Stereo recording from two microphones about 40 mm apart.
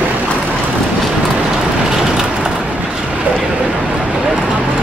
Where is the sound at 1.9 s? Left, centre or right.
Centre.